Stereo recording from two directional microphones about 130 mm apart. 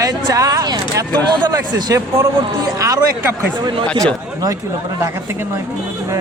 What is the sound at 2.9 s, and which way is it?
Speech, 15° right (ahead or behind).